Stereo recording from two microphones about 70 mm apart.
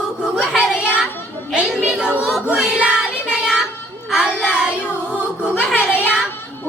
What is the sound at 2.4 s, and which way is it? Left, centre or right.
Child singing, centre.